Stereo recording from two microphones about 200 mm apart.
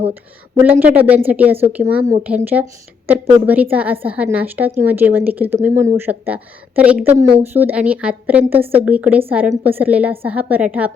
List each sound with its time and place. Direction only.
0.6 s a woman's voice: 10° right (ahead or behind)